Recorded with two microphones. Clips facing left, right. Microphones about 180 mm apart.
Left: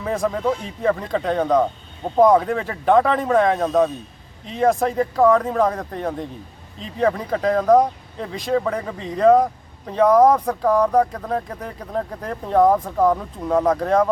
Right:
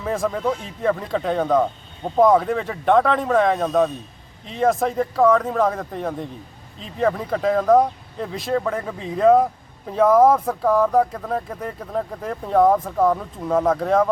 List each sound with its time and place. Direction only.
0.0 s speech: centre (ahead or behind)